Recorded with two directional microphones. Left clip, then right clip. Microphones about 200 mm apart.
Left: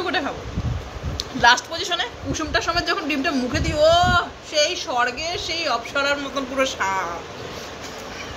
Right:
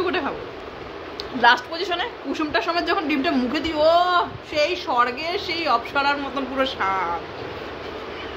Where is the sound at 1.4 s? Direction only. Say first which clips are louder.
Left 1 dB; 10° right (ahead or behind).